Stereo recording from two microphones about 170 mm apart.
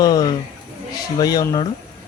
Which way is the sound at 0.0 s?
20° left (ahead or behind).